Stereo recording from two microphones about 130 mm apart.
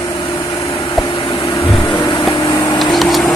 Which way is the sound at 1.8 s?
35° left (ahead or behind).